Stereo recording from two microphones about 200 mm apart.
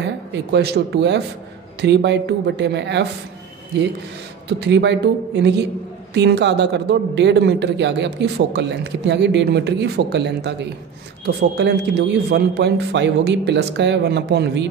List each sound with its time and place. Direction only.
0.0 s a man's voice: 60° right (ahead or behind)
4.5 s a man's voice: 60° right (ahead or behind)